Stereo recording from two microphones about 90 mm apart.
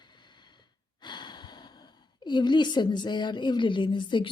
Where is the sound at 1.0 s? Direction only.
55° left (ahead or behind).